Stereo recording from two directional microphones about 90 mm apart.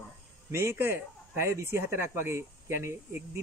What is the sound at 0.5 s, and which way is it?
Speech, 30° right (ahead or behind).